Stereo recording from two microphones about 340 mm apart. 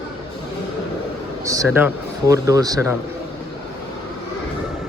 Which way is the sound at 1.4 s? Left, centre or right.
Centre.